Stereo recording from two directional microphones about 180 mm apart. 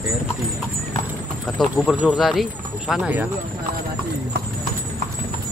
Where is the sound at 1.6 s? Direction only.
Centre (ahead or behind).